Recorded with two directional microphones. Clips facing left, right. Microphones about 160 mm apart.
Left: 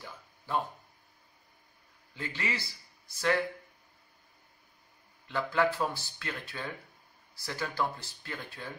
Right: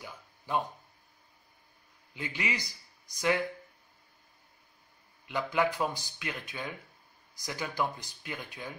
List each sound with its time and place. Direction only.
0.5 s speech: 15° right (ahead or behind)
2.1 s speech: 15° right (ahead or behind)
5.2 s speech: 15° right (ahead or behind)